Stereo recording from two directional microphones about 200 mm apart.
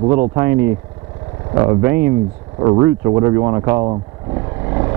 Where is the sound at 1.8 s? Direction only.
15° right (ahead or behind).